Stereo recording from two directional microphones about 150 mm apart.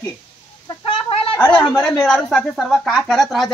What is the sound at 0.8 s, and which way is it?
Chicken, 35° left (ahead or behind).